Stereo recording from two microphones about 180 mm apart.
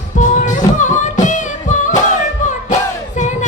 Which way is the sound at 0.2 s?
45° left (ahead or behind).